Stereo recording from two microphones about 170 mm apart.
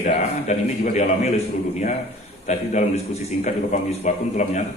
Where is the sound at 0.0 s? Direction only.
45° left (ahead or behind).